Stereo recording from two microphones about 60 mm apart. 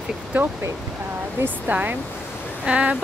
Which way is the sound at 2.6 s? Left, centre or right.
Centre.